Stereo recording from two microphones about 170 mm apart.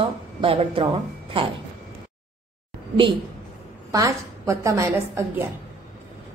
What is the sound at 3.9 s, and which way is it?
A woman's voice, 20° right (ahead or behind).